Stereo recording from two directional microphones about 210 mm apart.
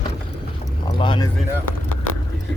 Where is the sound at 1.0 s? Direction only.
25° left (ahead or behind).